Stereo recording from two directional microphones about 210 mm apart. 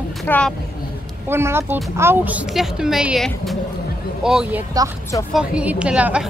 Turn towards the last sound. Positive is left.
turn(degrees=-5)  # may be behind; listen again after turning